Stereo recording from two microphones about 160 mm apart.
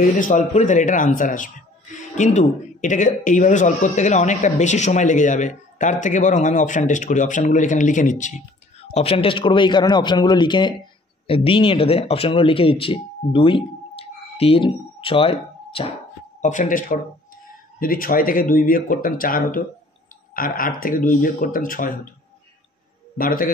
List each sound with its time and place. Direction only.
0.2 s speech: 50° left (ahead or behind)
16.3 s speech: 50° left (ahead or behind)
23.1 s speech: 60° left (ahead or behind)